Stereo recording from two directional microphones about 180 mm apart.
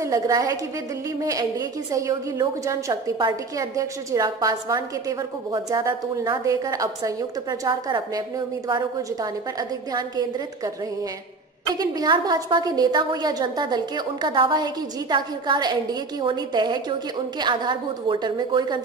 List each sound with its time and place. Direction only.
0.0 s a woman's voice: 20° right (ahead or behind)
11.7 s a woman's voice: 20° right (ahead or behind)